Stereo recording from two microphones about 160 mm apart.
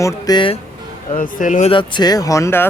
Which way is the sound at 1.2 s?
55° left (ahead or behind).